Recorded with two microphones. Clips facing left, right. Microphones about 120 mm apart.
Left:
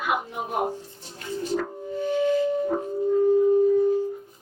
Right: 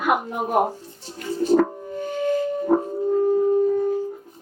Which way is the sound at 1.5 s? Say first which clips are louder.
Right 11 dB; 45° right (ahead or behind).